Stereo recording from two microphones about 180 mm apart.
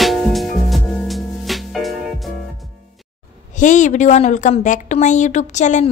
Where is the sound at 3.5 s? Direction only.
45° left (ahead or behind).